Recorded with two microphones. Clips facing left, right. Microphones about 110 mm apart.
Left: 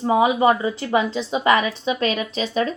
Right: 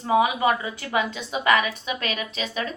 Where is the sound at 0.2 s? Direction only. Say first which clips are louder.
Left 7 dB; 25° left (ahead or behind).